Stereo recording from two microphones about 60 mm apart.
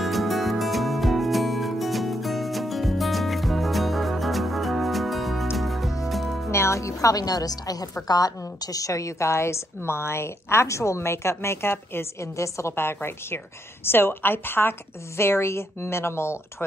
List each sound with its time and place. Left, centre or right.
0.0 s music: centre
6.5 s a woman's voice: left
12.7 s a woman's voice: left